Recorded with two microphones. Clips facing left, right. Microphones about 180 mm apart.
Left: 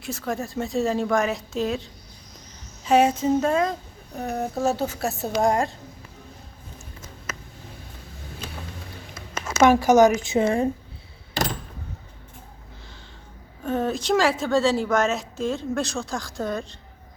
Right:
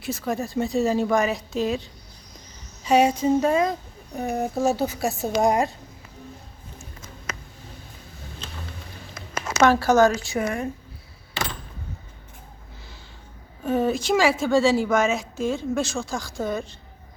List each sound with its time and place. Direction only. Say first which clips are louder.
0.0 s a woman's voice: right 2 dB; centre (ahead or behind)
9.6 s a woman's voice: left 2 dB; 15° left (ahead or behind)
13.7 s a woman's voice: right 2 dB; 5° right (ahead or behind)